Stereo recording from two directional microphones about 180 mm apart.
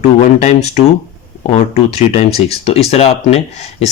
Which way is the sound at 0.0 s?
40° left (ahead or behind).